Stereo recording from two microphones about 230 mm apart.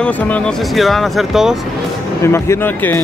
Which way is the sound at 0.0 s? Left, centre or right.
Centre.